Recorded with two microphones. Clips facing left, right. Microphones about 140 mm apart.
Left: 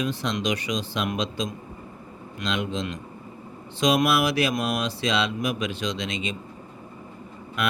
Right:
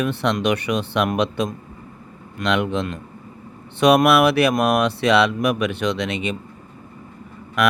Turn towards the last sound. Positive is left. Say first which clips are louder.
# right 8 dB
turn(degrees=-75)  # may be behind; listen again after turning